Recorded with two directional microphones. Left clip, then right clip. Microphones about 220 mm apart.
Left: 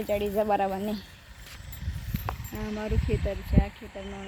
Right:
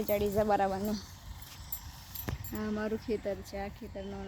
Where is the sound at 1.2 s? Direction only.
45° left (ahead or behind).